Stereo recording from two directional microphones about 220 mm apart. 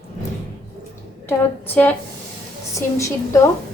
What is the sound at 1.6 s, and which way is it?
Speech, 5° left (ahead or behind).